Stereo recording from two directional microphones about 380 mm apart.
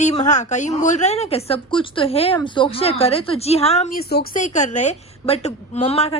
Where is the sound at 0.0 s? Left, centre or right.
Centre.